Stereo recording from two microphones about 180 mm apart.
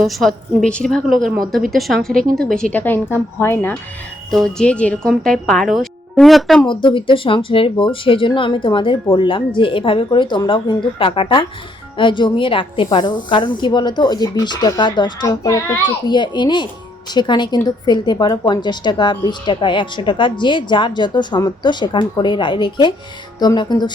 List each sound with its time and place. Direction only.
0.0 s a woman's voice: centre (ahead or behind)
6.8 s a woman's voice: 30° left (ahead or behind)